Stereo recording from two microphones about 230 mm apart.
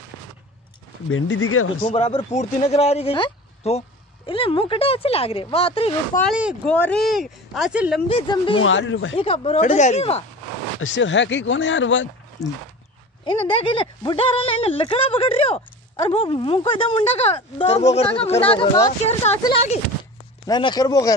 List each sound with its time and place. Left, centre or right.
1.1 s speech: left
1.9 s speech: left
6.3 s speech: centre
8.1 s speech: left
8.5 s speech: left
9.1 s speech: left
10.8 s speech: left
12.4 s speech: centre
20.4 s speech: centre